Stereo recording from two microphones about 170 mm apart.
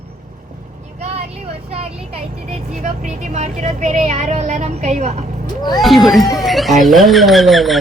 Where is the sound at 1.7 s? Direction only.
35° right (ahead or behind).